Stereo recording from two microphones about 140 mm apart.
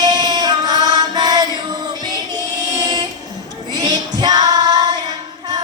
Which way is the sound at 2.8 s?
30° right (ahead or behind).